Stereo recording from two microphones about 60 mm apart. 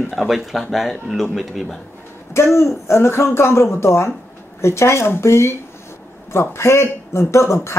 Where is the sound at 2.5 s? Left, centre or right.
Left.